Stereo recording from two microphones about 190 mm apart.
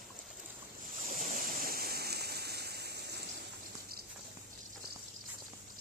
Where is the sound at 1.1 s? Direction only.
45° right (ahead or behind).